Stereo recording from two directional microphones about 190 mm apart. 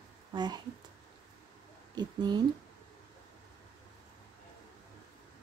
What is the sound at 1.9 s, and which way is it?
Speech, 20° right (ahead or behind).